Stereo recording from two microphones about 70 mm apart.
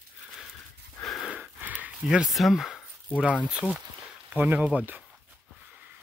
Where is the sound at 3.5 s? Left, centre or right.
Centre.